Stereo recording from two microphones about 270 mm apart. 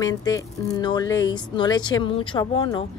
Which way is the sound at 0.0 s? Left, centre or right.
Centre.